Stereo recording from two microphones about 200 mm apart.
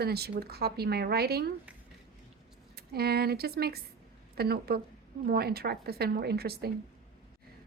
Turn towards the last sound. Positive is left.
turn(degrees=-50)  # may be behind; listen again after turning